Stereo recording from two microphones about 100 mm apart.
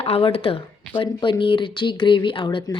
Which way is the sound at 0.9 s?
50° left (ahead or behind).